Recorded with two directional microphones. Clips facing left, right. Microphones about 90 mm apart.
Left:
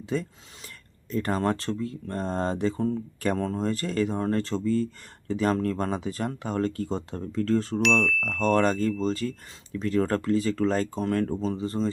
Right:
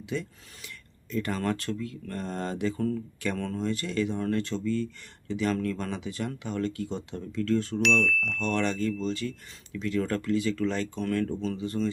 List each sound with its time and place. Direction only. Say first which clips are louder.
0.0 s speech: left 4 dB; 40° left (ahead or behind)
7.8 s chime: left 2 dB; centre (ahead or behind)
8.4 s speech: left 7 dB; 40° left (ahead or behind)